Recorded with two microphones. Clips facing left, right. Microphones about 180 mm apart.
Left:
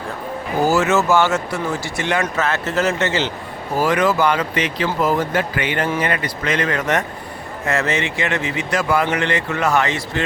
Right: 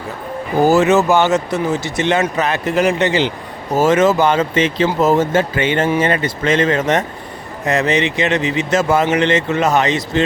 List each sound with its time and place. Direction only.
0.6 s speech: 20° right (ahead or behind)